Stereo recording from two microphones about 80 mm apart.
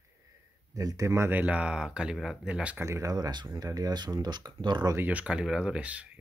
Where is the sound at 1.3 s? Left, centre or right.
Centre.